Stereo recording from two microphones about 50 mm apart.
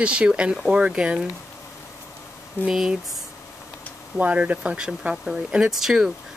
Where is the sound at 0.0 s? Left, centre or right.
Right.